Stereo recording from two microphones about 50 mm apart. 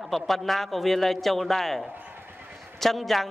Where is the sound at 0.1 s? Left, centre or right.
Centre.